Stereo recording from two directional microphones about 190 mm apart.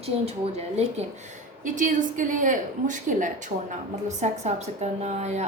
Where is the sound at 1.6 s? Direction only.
45° right (ahead or behind).